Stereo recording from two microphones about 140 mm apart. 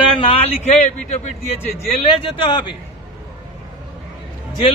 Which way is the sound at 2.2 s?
40° left (ahead or behind).